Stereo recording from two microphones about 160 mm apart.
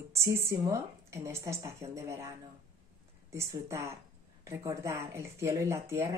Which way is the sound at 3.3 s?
20° right (ahead or behind).